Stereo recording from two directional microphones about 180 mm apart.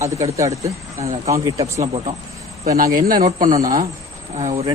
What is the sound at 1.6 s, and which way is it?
Speech, 35° right (ahead or behind).